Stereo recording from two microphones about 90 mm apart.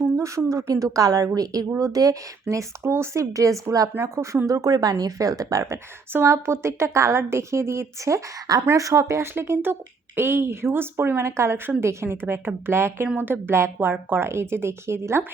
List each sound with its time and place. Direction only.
0.2 s a woman's voice: 35° right (ahead or behind)